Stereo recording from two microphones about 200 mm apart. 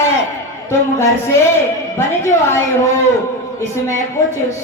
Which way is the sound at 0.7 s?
15° left (ahead or behind).